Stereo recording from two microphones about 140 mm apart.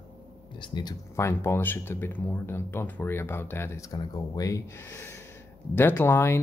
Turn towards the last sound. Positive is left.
turn(degrees=15)  # may be behind; listen again after turning